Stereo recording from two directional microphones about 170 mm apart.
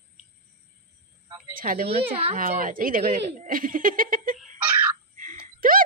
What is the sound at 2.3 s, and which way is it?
Speech, 55° right (ahead or behind).